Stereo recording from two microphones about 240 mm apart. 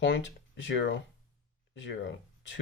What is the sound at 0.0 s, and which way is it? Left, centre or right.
Speech, left.